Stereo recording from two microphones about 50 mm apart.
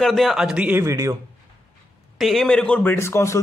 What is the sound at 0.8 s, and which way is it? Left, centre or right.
Speech, right.